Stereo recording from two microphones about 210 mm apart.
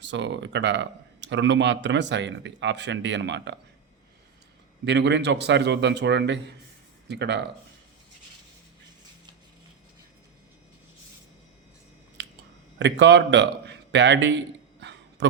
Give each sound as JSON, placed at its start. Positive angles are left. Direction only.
{"t": 0.0, "sound": "speech", "side_deg": -60}
{"t": 4.9, "sound": "speech", "side_deg": -55}
{"t": 12.2, "sound": "a sound", "side_deg": -55}
{"t": 12.8, "sound": "a man's voice", "side_deg": -55}